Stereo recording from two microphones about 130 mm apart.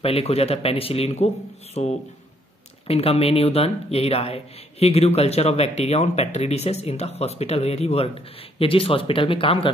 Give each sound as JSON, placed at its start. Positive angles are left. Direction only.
{"t": 0.0, "sound": "speech", "side_deg": 50}